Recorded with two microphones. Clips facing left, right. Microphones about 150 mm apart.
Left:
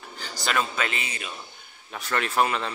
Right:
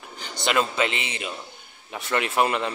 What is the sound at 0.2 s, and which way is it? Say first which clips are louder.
A man's voice: right 3 dB; 20° right (ahead or behind).